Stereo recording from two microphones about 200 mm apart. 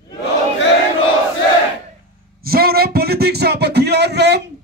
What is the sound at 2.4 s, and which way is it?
Speech, 50° right (ahead or behind).